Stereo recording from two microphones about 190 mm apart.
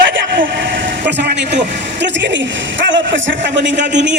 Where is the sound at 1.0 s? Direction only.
65° right (ahead or behind).